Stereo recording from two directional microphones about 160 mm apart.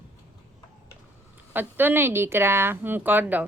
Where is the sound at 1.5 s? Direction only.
10° right (ahead or behind).